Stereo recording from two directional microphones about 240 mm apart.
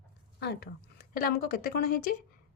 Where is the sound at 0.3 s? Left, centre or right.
Left.